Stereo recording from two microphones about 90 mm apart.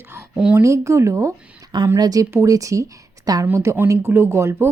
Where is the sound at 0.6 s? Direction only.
35° right (ahead or behind).